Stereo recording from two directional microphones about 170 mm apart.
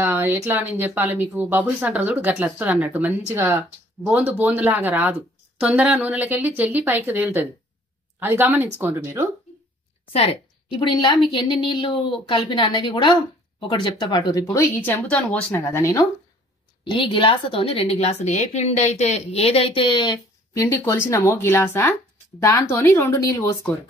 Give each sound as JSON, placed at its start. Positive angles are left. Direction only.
{"t": 0.0, "sound": "speech", "side_deg": -10}
{"t": 10.1, "sound": "a woman's voice", "side_deg": 30}
{"t": 17.0, "sound": "a woman's voice", "side_deg": 30}